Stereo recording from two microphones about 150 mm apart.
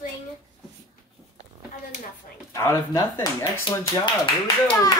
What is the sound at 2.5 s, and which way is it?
Speech, 20° left (ahead or behind).